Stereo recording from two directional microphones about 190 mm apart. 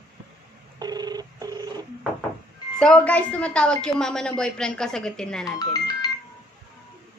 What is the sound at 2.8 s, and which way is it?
A woman's voice, 5° left (ahead or behind).